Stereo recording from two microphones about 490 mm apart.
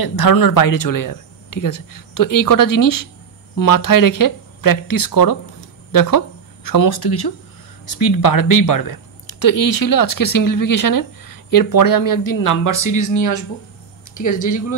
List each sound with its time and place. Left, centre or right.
0.0 s speech: left